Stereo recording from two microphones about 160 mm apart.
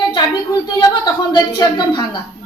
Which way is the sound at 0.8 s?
25° left (ahead or behind).